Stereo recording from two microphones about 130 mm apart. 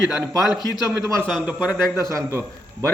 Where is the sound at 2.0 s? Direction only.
25° right (ahead or behind).